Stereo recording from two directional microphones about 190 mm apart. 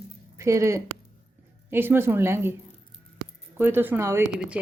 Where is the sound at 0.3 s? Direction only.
15° right (ahead or behind).